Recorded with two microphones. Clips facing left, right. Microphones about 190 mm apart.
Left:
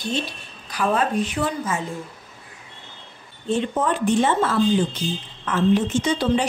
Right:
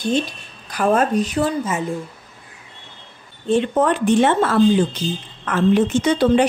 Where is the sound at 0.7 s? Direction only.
50° right (ahead or behind).